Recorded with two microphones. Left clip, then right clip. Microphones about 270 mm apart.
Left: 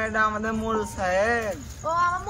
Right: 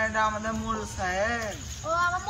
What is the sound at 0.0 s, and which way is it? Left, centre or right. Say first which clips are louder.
A man's voice: left 2 dB; left.